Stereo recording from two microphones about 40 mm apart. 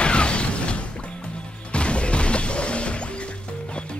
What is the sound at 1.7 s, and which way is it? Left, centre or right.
Music, left.